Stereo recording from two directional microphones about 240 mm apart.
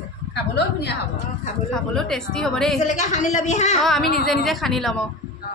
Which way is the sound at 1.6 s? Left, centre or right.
Centre.